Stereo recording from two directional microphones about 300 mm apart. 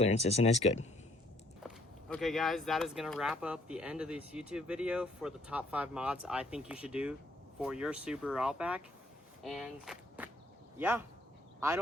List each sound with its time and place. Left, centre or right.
0.0 s speech: left
1.6 s speech: centre